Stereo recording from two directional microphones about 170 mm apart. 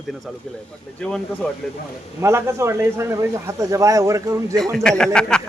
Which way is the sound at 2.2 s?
15° right (ahead or behind).